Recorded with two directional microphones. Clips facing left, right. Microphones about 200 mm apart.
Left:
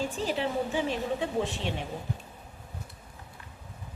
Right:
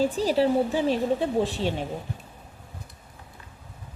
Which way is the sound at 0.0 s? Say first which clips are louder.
Right 8 dB; 35° right (ahead or behind).